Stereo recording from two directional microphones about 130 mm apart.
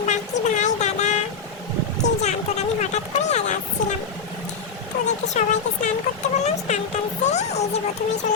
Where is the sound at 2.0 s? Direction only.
65° left (ahead or behind).